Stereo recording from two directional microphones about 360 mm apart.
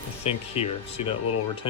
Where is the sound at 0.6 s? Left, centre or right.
Centre.